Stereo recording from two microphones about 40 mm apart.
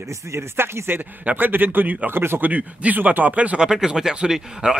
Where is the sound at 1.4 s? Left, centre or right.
Right.